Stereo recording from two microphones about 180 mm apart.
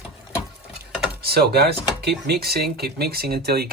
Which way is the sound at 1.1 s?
60° right (ahead or behind).